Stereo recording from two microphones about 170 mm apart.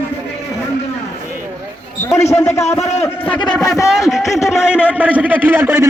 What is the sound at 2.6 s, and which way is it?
Speech, 40° left (ahead or behind).